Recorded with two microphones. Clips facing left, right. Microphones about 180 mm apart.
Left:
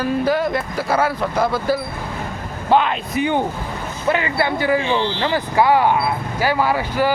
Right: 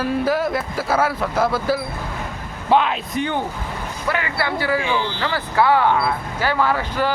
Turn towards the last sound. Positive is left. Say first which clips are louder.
# left 2 dB
turn(degrees=10)  # may be behind; listen again after turning